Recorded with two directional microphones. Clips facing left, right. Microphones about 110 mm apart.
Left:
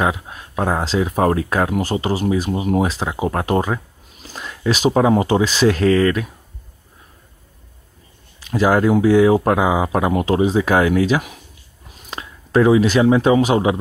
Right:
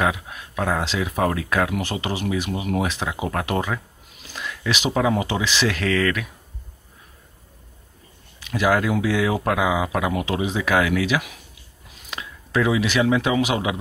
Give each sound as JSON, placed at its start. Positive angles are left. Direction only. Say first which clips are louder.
{"t": 0.0, "sound": "speech", "louder": "left 3 dB", "side_deg": 30}
{"t": 8.4, "sound": "speech", "louder": "left 4 dB", "side_deg": 35}